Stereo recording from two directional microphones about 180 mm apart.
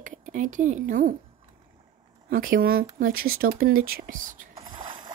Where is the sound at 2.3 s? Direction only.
50° right (ahead or behind).